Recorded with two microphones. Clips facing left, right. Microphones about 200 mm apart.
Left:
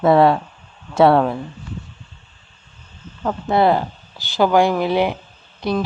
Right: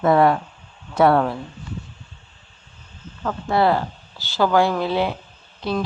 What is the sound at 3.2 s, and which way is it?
Speech, 20° left (ahead or behind).